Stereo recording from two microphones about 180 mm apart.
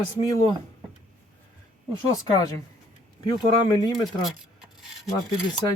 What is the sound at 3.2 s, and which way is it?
Speech, 25° left (ahead or behind).